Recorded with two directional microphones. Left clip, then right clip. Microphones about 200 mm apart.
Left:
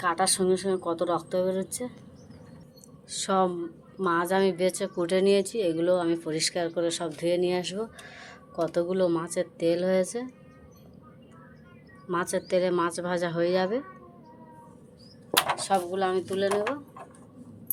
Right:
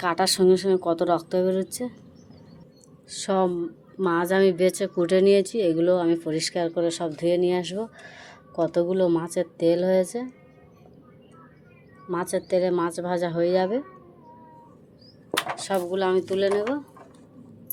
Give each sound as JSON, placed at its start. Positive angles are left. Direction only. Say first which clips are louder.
{"t": 0.0, "sound": "speech", "louder": "right 4 dB", "side_deg": -50}
{"t": 3.1, "sound": "speech", "louder": "right 2 dB", "side_deg": -25}
{"t": 4.0, "sound": "speech", "louder": "right 4 dB", "side_deg": -40}
{"t": 12.1, "sound": "speech", "louder": "right 2 dB", "side_deg": -20}
{"t": 15.5, "sound": "speech", "louder": "right 1 dB", "side_deg": -40}